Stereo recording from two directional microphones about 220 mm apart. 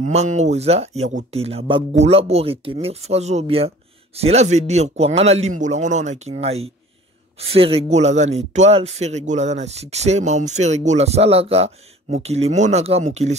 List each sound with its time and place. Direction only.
0.0 s speech: 30° right (ahead or behind)